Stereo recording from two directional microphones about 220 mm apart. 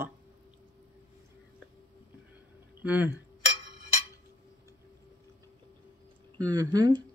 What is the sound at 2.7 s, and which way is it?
Speech, 10° right (ahead or behind).